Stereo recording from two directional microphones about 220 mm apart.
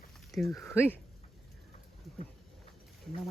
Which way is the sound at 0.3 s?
Centre (ahead or behind).